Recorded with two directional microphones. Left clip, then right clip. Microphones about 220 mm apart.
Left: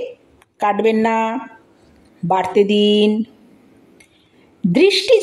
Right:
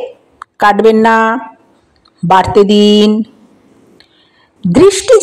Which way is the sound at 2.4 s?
25° right (ahead or behind).